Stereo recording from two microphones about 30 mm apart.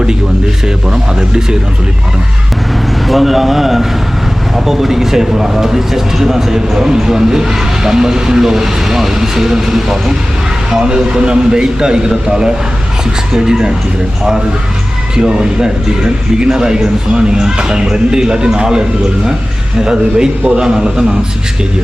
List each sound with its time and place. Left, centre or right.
0.9 s speech: right
3.1 s speech: centre
10.8 s speech: right
15.1 s speech: right